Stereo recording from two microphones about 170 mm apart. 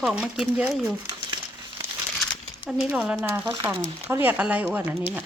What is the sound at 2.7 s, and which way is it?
Speech, 5° right (ahead or behind).